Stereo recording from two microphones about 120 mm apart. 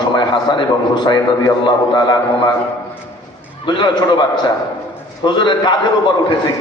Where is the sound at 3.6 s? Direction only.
40° left (ahead or behind).